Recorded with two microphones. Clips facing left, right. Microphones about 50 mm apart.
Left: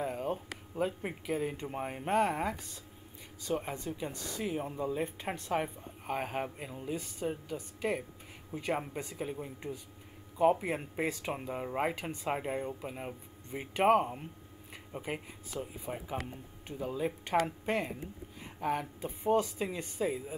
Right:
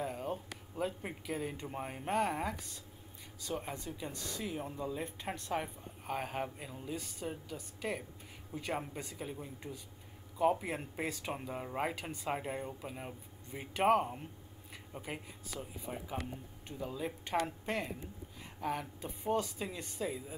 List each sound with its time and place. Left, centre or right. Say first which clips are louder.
0.0 s a sound: left 4 dB; centre
0.7 s speech: left 4 dB; centre
3.5 s speech: left 5 dB; left